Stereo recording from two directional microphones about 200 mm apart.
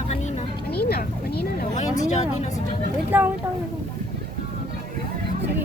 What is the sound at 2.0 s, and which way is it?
Speech, 35° left (ahead or behind).